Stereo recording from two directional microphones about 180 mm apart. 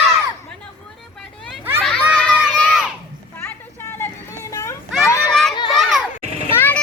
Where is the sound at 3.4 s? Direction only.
15° left (ahead or behind).